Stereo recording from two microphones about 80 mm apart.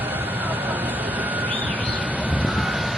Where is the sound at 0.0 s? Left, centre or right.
Right.